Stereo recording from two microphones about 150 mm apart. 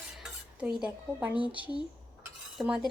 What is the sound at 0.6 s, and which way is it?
Speech, 5° right (ahead or behind).